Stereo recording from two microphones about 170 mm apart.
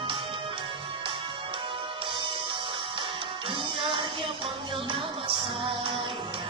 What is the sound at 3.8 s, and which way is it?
Music, 30° right (ahead or behind).